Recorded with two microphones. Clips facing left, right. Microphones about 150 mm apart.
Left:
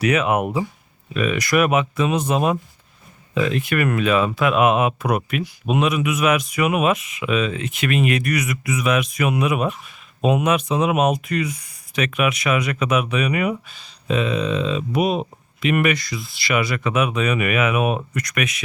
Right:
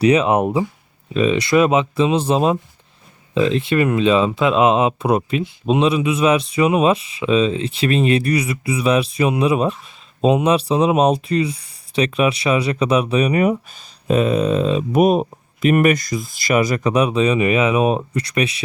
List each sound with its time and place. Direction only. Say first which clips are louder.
0.0 s speech: right 5 dB; 30° right (ahead or behind)